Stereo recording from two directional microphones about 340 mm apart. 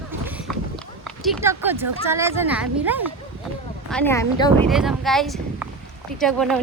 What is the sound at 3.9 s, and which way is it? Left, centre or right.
Speech, centre.